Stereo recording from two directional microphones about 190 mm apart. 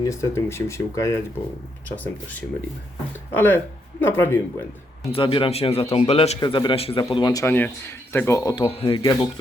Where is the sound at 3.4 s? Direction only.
10° left (ahead or behind).